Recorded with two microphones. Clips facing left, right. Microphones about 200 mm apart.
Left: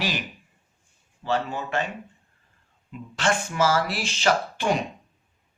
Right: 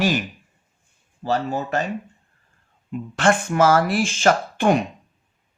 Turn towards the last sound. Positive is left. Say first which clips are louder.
# right 5 dB
turn(degrees=-55)  # may be behind; listen again after turning